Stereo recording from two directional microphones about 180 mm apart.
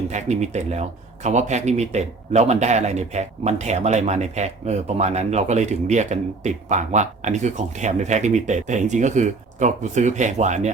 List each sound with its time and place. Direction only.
0.1 s speech: 40° right (ahead or behind)